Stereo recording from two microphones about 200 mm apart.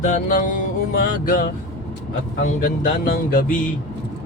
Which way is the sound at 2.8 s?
45° left (ahead or behind).